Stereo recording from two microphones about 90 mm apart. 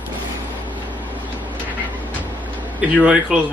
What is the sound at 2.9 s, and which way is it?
Speech, 15° right (ahead or behind).